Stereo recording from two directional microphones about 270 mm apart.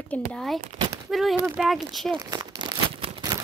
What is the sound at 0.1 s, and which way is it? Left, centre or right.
Speech, centre.